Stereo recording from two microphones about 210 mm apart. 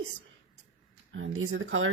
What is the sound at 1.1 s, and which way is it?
Speech, 75° right (ahead or behind).